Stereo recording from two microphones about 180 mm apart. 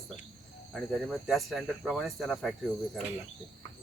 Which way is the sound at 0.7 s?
Centre (ahead or behind).